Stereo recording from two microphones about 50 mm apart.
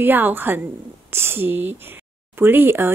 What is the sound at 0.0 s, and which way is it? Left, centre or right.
A woman's voice, right.